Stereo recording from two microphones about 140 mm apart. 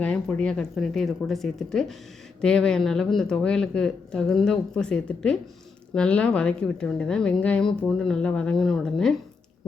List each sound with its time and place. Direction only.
0.0 s a woman's voice: 10° left (ahead or behind)